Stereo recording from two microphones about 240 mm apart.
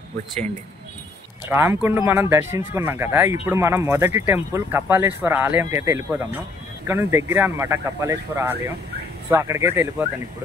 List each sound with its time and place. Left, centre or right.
1.5 s speech: centre